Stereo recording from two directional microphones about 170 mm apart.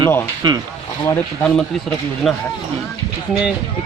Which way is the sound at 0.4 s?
25° right (ahead or behind).